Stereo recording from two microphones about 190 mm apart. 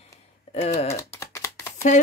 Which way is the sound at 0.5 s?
35° left (ahead or behind).